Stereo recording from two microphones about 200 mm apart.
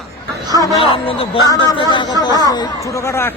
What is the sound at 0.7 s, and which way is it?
Speech, 30° left (ahead or behind).